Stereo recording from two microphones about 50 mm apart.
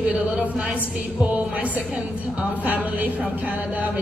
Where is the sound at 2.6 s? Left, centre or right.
Right.